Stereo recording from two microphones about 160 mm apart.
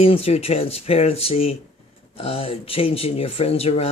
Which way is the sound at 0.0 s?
40° left (ahead or behind).